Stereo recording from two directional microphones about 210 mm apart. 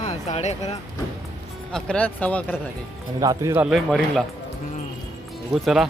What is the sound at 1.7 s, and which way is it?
Speech, 5° left (ahead or behind).